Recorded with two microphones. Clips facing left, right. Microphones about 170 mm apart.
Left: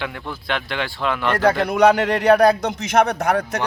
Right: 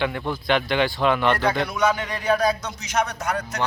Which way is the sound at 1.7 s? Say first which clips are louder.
Left 8 dB; 65° left (ahead or behind).